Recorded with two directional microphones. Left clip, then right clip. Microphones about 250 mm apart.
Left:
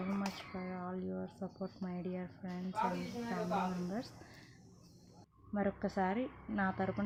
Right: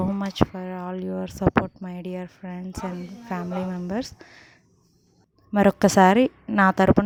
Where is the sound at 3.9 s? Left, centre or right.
Right.